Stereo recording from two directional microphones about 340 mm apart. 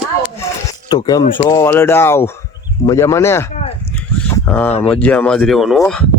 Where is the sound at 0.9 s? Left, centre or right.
Centre.